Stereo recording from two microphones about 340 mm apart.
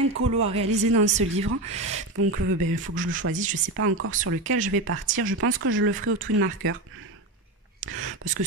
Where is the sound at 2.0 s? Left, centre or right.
Right.